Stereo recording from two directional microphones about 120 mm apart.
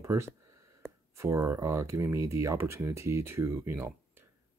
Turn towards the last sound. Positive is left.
turn(degrees=-20)  # may be behind; listen again after turning